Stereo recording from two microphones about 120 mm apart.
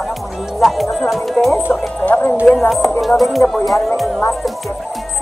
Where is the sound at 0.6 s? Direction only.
Centre (ahead or behind).